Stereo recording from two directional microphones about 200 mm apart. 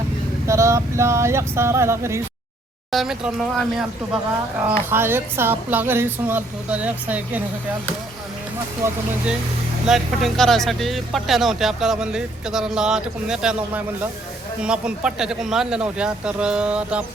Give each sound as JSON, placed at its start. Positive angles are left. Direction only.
{"t": 0.4, "sound": "a woman's voice", "side_deg": -15}
{"t": 2.9, "sound": "speech", "side_deg": 0}
{"t": 4.9, "sound": "a woman's voice", "side_deg": -10}
{"t": 8.8, "sound": "a woman's voice", "side_deg": -15}
{"t": 9.8, "sound": "speech", "side_deg": 0}